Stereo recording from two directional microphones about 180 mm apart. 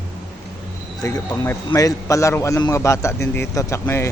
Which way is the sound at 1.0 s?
20° left (ahead or behind).